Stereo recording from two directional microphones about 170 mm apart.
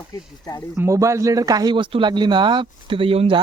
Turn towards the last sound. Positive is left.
turn(degrees=-35)  # may be behind; listen again after turning